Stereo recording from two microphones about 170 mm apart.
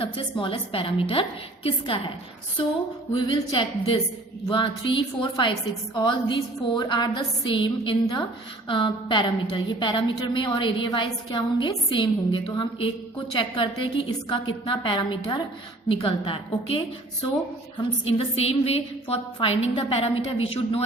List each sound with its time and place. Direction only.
0.0 s a woman's voice: 30° left (ahead or behind)
3.1 s a woman's voice: 30° left (ahead or behind)